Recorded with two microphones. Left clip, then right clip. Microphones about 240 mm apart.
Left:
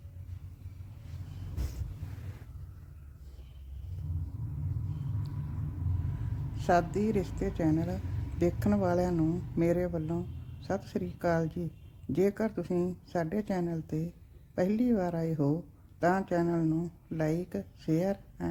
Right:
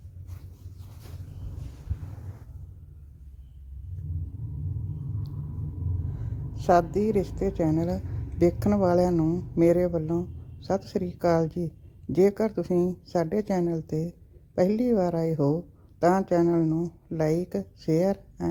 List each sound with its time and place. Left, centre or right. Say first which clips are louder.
6.6 s a woman's voice: right 6 dB; centre